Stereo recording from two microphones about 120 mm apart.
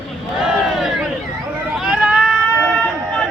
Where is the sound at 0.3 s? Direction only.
5° right (ahead or behind).